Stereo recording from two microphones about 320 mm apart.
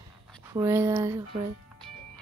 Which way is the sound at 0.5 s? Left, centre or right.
Centre.